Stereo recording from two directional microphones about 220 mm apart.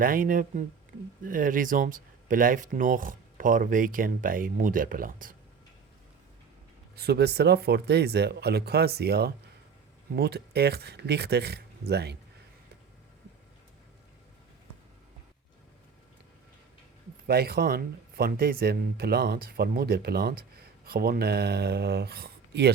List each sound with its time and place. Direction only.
0.0 s speech: 40° right (ahead or behind)
6.9 s speech: 45° right (ahead or behind)
17.2 s speech: 45° right (ahead or behind)